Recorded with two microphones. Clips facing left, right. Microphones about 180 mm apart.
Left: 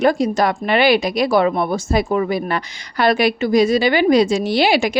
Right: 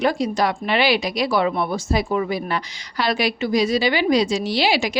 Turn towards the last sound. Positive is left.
turn(degrees=55)  # may be behind; listen again after turning